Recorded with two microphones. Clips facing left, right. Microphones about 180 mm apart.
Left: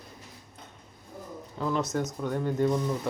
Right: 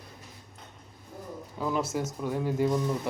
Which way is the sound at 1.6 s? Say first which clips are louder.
Left 1 dB; 10° right (ahead or behind).